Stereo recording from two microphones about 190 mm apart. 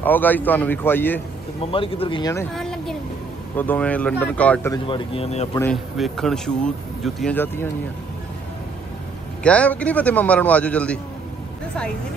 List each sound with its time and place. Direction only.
0.0 s a man's voice: 10° left (ahead or behind)
1.6 s speech: 30° left (ahead or behind)
2.5 s vehicle: centre (ahead or behind)
3.5 s a man's voice: 10° left (ahead or behind)
4.8 s speech: 30° left (ahead or behind)
5.6 s speech: 5° left (ahead or behind)
9.4 s a man's voice: 5° left (ahead or behind)